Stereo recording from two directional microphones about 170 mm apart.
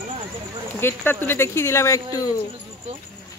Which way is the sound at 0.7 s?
15° left (ahead or behind).